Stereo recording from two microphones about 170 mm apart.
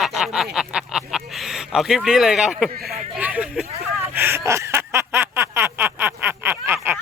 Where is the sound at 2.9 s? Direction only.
5° right (ahead or behind).